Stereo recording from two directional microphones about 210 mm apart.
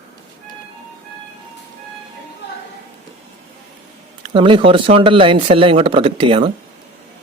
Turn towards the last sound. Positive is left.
turn(degrees=-25)  # may be behind; listen again after turning